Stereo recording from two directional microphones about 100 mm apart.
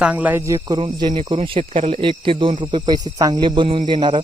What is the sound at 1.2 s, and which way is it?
Speech, 75° right (ahead or behind).